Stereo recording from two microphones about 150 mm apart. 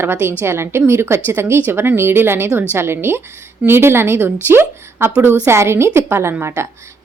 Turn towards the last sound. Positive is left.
turn(degrees=-20)  # may be behind; listen again after turning